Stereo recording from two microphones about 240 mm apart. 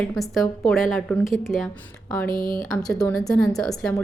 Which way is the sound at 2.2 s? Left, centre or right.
Left.